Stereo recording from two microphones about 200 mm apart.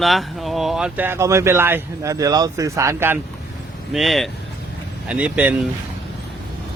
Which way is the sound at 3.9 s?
Centre (ahead or behind).